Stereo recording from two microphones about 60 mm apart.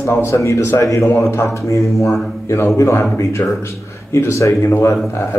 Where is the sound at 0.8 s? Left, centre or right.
Left.